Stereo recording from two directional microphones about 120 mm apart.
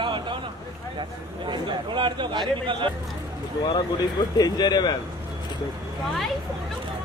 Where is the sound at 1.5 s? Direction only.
45° right (ahead or behind).